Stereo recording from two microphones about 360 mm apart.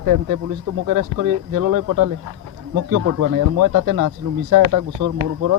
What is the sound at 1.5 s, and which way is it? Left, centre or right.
Speech, right.